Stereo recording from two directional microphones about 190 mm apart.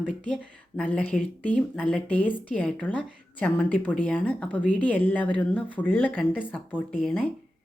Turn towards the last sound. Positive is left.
turn(degrees=5)  # may be behind; listen again after turning